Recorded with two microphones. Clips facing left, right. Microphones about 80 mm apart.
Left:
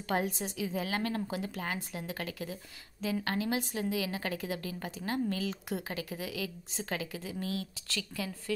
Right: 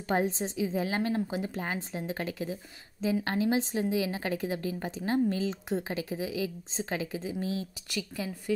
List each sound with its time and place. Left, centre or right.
0.1 s a woman's voice: right